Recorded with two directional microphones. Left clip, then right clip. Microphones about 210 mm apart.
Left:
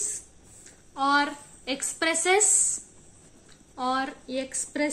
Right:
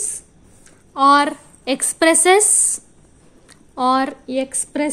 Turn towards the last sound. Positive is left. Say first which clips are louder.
# right 7 dB
turn(degrees=-50)  # may be behind; listen again after turning